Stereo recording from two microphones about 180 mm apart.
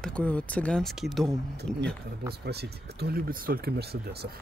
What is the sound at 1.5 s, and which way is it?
Speech, 65° right (ahead or behind).